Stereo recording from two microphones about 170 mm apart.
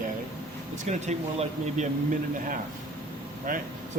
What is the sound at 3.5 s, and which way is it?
Speech, 55° right (ahead or behind).